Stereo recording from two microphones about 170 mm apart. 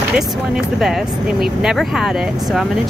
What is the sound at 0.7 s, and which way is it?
Speech, centre (ahead or behind).